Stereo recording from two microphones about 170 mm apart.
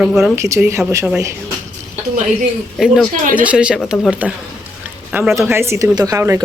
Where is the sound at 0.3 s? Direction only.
15° right (ahead or behind).